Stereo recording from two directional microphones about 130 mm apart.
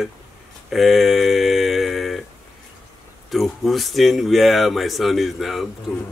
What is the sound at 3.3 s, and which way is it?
Speech, centre (ahead or behind).